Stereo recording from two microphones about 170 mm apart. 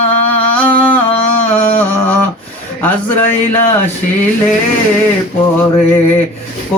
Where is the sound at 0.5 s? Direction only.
10° left (ahead or behind).